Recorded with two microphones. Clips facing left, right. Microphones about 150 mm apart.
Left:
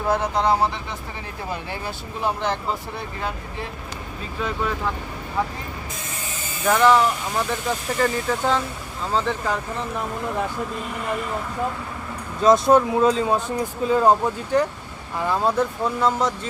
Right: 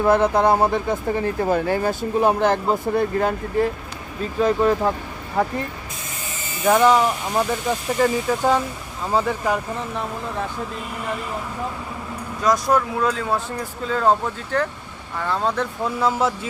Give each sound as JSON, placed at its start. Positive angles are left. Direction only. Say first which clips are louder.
{"t": 0.1, "sound": "speech", "louder": "right 3 dB", "side_deg": -55}
{"t": 6.7, "sound": "speech", "louder": "right 1 dB", "side_deg": -15}
{"t": 12.4, "sound": "speech", "louder": "left 4 dB", "side_deg": 25}
{"t": 16.0, "sound": "speech", "louder": "right 2 dB", "side_deg": -5}